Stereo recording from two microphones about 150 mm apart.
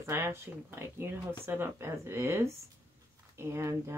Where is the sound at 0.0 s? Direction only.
15° right (ahead or behind).